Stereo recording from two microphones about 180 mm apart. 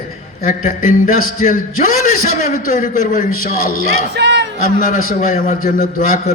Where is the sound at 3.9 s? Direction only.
75° right (ahead or behind).